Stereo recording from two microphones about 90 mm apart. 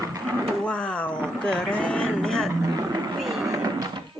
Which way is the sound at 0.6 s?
10° left (ahead or behind).